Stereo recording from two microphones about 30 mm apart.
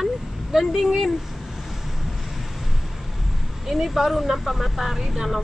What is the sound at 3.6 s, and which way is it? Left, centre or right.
Speech, centre.